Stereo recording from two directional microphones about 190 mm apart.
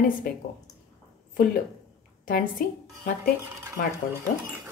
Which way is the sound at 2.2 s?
45° left (ahead or behind).